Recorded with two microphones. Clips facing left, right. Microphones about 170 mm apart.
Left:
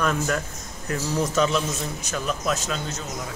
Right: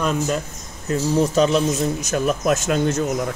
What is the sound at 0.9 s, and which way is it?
A man's voice, 35° right (ahead or behind).